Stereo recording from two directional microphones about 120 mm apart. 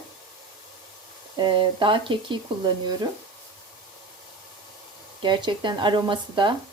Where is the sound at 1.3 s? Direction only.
40° right (ahead or behind).